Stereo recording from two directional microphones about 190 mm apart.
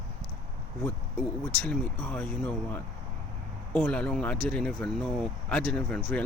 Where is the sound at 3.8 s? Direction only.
5° left (ahead or behind).